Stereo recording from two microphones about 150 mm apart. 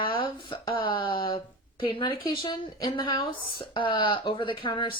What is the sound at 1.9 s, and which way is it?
Speech, 35° left (ahead or behind).